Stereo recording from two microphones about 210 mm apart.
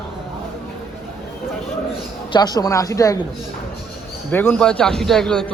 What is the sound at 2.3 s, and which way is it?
Speech, 20° left (ahead or behind).